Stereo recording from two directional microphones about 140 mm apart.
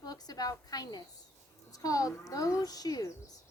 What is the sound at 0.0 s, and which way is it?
A woman's voice, 25° left (ahead or behind).